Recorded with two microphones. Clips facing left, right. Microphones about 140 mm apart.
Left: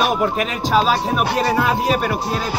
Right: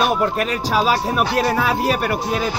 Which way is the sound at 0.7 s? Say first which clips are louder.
Left 2 dB; 5° right (ahead or behind).